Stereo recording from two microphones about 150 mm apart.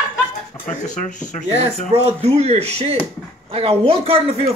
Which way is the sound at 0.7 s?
55° left (ahead or behind).